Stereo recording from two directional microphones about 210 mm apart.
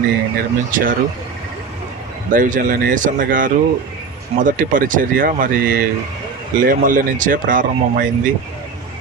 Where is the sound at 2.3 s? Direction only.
40° right (ahead or behind).